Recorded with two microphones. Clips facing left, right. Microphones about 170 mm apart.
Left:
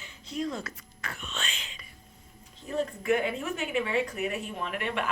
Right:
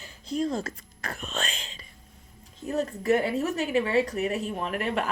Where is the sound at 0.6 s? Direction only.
40° right (ahead or behind).